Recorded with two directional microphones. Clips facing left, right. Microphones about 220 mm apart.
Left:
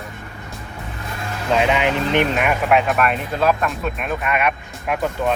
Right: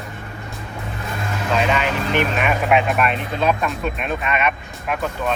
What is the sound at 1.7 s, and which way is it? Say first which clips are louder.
Speech: left 2 dB; 20° left (ahead or behind).